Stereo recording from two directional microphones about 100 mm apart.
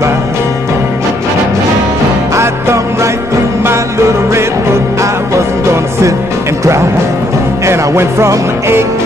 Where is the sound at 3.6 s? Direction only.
25° right (ahead or behind).